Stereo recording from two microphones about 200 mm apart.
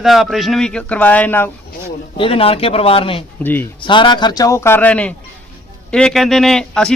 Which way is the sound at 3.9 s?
25° left (ahead or behind).